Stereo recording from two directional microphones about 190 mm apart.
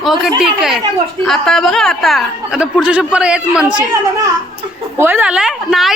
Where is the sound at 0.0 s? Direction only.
Centre (ahead or behind).